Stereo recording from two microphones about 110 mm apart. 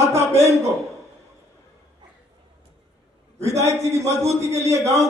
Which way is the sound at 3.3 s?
90° right.